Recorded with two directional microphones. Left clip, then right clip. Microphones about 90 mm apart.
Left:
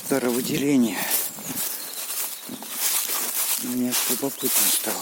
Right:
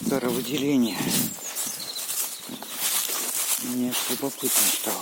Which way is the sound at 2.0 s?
20° left (ahead or behind).